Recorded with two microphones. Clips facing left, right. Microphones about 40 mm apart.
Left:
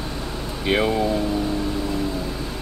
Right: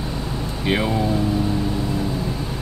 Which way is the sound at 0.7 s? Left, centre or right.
Centre.